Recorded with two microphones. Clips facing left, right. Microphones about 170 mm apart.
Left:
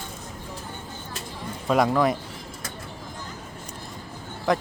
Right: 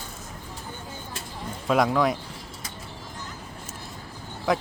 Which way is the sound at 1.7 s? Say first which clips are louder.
Left 1 dB; centre (ahead or behind).